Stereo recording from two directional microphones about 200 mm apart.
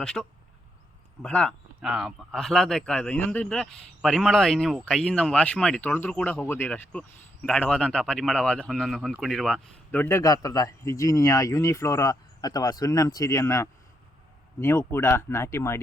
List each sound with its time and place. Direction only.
0.0 s speech: 5° left (ahead or behind)
9.9 s speech: 10° left (ahead or behind)